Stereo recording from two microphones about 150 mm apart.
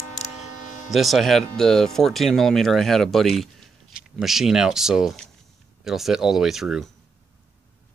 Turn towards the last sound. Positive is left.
turn(degrees=0)  # may be behind; listen again after turning